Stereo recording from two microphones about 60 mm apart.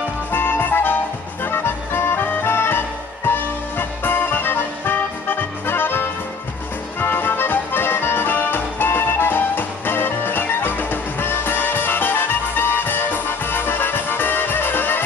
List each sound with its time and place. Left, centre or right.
0.3 s music: left